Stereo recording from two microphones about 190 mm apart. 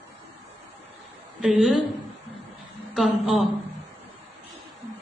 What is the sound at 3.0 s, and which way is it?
Speech, centre (ahead or behind).